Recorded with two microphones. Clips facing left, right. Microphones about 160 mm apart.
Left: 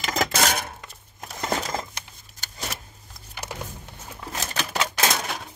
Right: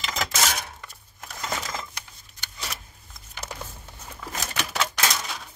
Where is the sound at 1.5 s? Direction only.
40° left (ahead or behind).